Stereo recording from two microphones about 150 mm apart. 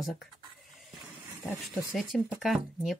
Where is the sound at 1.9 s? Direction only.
Centre (ahead or behind).